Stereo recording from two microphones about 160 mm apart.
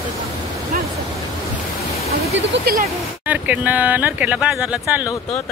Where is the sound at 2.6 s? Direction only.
70° right (ahead or behind).